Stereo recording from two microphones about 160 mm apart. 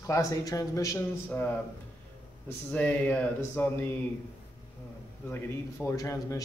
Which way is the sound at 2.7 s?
10° left (ahead or behind).